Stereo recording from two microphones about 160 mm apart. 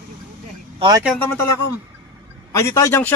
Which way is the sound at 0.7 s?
30° right (ahead or behind).